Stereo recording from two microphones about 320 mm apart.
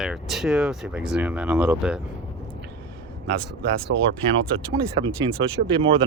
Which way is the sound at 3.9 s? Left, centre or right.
Right.